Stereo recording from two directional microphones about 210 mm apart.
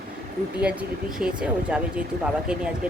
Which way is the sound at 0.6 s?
5° right (ahead or behind).